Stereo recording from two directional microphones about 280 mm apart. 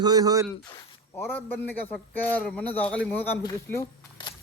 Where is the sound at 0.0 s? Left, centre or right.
Centre.